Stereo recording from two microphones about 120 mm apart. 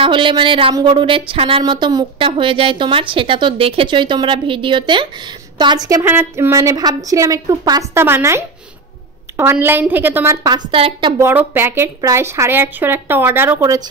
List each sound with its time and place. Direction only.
0.0 s speech: 45° right (ahead or behind)
1.6 s a woman's voice: 35° right (ahead or behind)
2.1 s a woman's voice: 45° right (ahead or behind)
6.0 s a woman's voice: 15° right (ahead or behind)
6.5 s a woman's voice: 25° right (ahead or behind)
7.9 s a woman's voice: 20° right (ahead or behind)
10.7 s speech: 50° right (ahead or behind)
11.1 s a woman's voice: 20° right (ahead or behind)